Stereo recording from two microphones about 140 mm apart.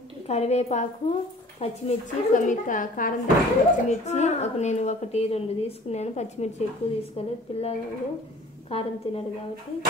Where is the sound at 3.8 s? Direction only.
55° left (ahead or behind).